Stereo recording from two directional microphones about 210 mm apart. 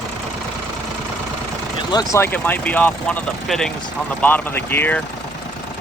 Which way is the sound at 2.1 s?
10° left (ahead or behind).